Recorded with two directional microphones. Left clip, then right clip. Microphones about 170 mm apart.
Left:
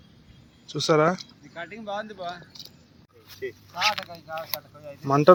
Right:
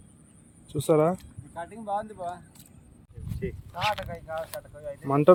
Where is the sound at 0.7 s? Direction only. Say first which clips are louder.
Left 2 dB; 10° right (ahead or behind).